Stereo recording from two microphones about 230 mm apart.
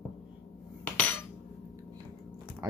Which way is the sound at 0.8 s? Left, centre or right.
Centre.